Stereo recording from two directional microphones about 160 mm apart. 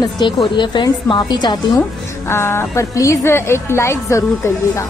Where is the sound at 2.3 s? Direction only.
15° left (ahead or behind).